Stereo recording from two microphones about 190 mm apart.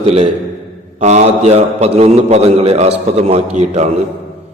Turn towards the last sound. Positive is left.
turn(degrees=-35)  # may be behind; listen again after turning